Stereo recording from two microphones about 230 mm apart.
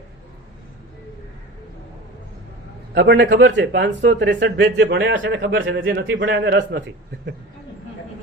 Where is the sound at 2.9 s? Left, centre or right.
Right.